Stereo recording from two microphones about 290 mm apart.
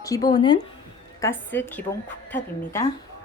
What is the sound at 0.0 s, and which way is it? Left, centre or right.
Speech, centre.